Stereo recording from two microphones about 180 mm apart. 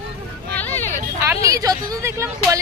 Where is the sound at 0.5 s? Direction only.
10° left (ahead or behind).